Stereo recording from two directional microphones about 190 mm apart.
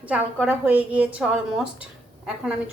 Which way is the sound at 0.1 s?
10° right (ahead or behind).